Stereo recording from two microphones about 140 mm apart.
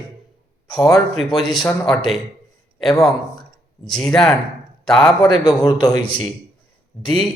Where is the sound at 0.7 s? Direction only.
25° left (ahead or behind).